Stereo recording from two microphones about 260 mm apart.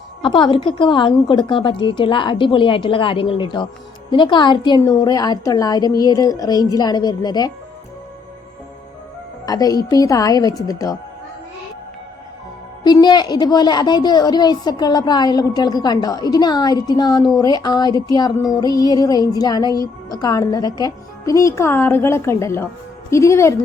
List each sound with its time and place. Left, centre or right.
0.2 s a woman's voice: centre
9.5 s a woman's voice: centre
12.8 s a woman's voice: centre